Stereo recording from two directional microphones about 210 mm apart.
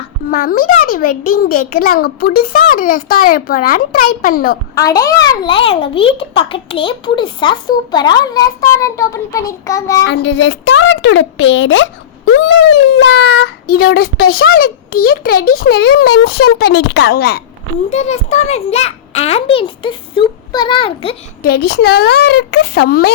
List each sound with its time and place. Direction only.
0.3 s a child's voice: 40° left (ahead or behind)
4.7 s a child's voice: 15° left (ahead or behind)
10.1 s a woman's voice: 55° left (ahead or behind); by 13.5 s 75° left (ahead or behind)
13.7 s a child's voice: 45° left (ahead or behind)
17.8 s a child's voice: 30° left (ahead or behind)
21.4 s a child's voice: 50° left (ahead or behind)